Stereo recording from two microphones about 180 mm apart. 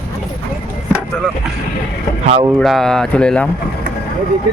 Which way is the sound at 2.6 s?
Centre (ahead or behind).